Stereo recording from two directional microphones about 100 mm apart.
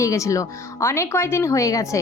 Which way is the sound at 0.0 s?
30° left (ahead or behind).